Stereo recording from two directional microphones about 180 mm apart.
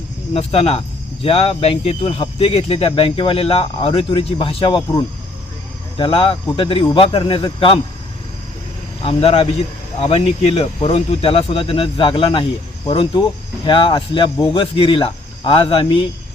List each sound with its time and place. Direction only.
0.3 s speech: 35° left (ahead or behind)
9.0 s speech: 30° left (ahead or behind)